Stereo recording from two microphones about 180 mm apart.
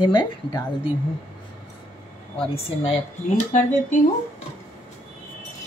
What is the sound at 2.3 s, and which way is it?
Speech, 30° left (ahead or behind).